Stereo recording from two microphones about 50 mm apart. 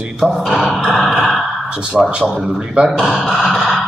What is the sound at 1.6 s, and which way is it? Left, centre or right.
Speech, centre.